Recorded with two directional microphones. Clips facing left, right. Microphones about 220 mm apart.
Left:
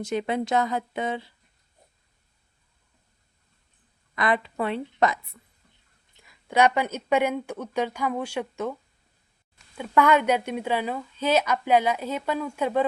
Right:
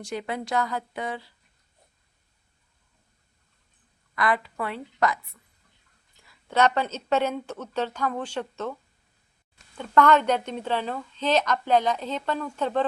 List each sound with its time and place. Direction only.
0.0 s speech: 20° left (ahead or behind)
4.1 s speech: 20° left (ahead or behind)
6.2 s speech: 10° left (ahead or behind)
9.7 s speech: 10° left (ahead or behind)